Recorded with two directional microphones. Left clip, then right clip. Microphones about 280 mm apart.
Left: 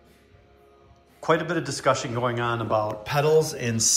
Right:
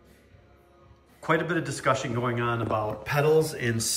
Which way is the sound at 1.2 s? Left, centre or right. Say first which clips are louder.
Left 2 dB; centre.